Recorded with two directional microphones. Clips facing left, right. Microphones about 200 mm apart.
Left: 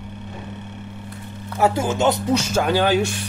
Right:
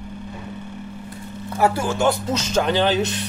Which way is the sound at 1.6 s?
20° left (ahead or behind).